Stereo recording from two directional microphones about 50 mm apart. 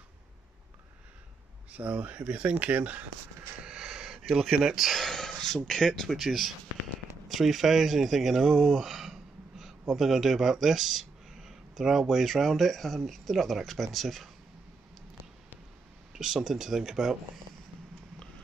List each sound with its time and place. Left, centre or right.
1.7 s speech: right
3.6 s a sound: centre
4.6 s speech: centre
5.0 s a sound: centre
5.7 s speech: centre
16.1 s speech: centre